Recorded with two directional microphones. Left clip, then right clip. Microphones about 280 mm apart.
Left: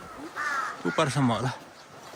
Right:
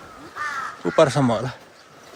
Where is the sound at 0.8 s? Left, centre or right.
Centre.